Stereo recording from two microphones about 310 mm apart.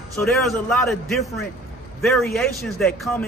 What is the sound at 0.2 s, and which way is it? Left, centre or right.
A man's voice, centre.